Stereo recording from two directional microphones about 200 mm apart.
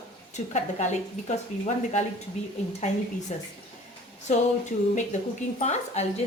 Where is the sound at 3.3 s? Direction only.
35° left (ahead or behind).